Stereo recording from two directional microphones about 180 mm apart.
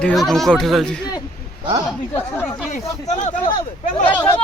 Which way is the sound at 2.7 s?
45° left (ahead or behind).